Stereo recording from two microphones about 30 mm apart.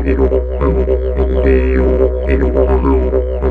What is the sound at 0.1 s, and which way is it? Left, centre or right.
Music, left.